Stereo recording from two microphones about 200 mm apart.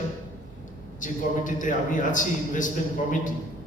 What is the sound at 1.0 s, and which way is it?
A man's voice, 40° left (ahead or behind).